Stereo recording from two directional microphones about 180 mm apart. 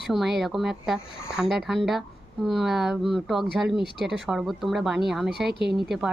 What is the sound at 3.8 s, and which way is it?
Speech, 65° right (ahead or behind).